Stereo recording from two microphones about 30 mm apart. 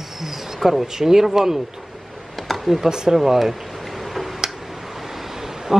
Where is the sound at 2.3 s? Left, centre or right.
Centre.